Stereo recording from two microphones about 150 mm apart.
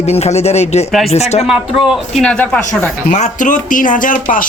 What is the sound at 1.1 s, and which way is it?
Speech, 45° left (ahead or behind).